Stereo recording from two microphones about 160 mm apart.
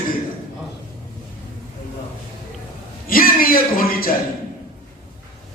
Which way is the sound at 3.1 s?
65° left (ahead or behind).